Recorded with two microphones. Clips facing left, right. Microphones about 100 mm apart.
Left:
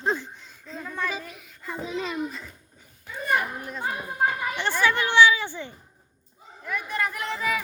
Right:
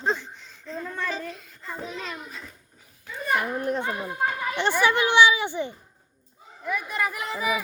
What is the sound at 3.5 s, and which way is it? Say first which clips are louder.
Speech: right 6 dB; 60° right (ahead or behind).